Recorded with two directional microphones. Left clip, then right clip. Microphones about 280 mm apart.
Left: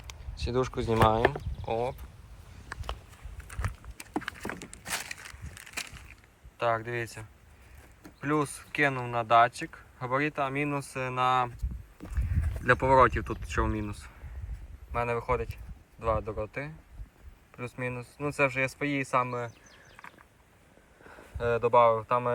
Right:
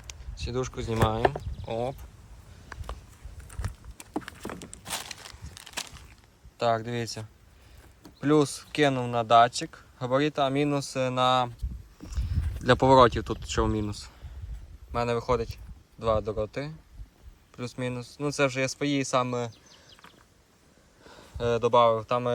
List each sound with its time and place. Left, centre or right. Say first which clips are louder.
0.1 s speech: left 2 dB; centre
4.1 s a sound: left 1 dB; centre
5.0 s crushing: even; right
5.7 s a sound: right 1 dB; right
6.6 s speech: right 2 dB; centre
12.9 s speech: right 4 dB; centre
21.1 s speech: right 1 dB; centre